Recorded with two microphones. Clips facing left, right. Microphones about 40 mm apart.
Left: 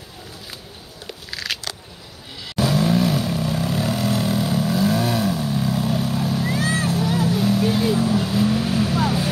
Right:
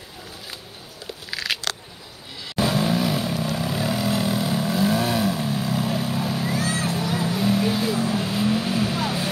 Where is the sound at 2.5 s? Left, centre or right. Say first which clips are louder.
Left 3 dB; centre.